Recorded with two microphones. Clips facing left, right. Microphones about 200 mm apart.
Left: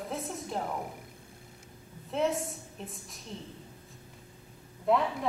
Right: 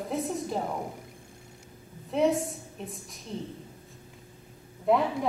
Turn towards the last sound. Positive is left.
turn(degrees=0)  # may be behind; listen again after turning